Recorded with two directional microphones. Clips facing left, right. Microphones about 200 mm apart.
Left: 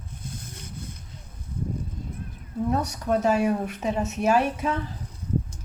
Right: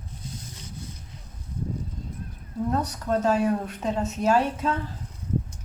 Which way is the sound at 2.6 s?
10° left (ahead or behind).